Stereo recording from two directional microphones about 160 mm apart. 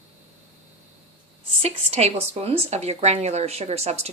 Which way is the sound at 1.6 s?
40° right (ahead or behind).